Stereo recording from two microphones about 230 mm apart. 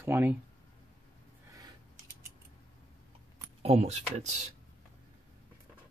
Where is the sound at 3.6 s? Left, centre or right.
Right.